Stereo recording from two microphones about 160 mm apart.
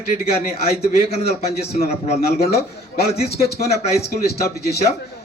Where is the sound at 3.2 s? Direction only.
80° left.